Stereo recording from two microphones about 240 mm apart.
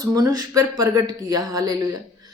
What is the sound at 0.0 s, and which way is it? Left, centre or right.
A woman's voice, centre.